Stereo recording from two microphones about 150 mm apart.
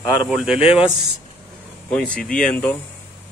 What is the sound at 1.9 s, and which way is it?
Speech, 5° left (ahead or behind).